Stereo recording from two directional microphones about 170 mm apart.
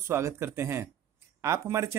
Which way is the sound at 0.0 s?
15° right (ahead or behind).